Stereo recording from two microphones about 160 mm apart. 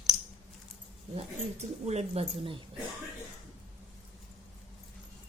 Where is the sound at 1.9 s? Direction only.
40° right (ahead or behind).